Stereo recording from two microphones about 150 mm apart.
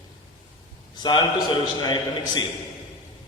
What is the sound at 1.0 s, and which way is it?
A man's voice, 30° left (ahead or behind).